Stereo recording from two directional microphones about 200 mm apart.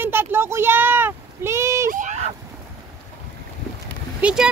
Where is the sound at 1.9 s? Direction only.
40° right (ahead or behind).